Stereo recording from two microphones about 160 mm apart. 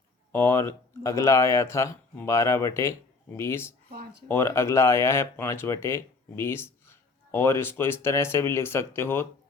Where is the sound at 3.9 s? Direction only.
75° right (ahead or behind).